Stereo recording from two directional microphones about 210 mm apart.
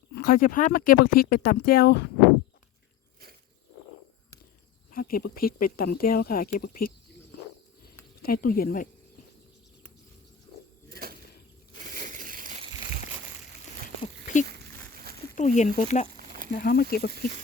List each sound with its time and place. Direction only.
0.2 s speech: 45° left (ahead or behind)
4.9 s speech: 45° left (ahead or behind)
8.2 s speech: 45° left (ahead or behind)
10.9 s bird flight: 45° right (ahead or behind)
11.7 s crushing: 40° right (ahead or behind)
15.4 s speech: 35° left (ahead or behind)